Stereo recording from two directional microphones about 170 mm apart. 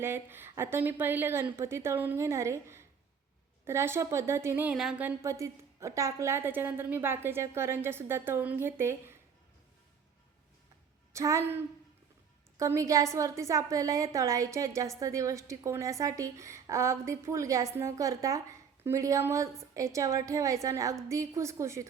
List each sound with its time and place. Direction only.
0.0 s a woman's voice: 15° right (ahead or behind)
11.1 s a woman's voice: 20° right (ahead or behind)